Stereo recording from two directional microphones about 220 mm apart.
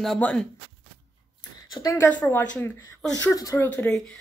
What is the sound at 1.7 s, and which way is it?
Speech, 15° left (ahead or behind).